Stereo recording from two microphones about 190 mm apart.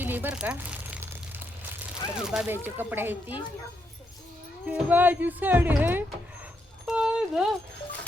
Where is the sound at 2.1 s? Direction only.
5° right (ahead or behind).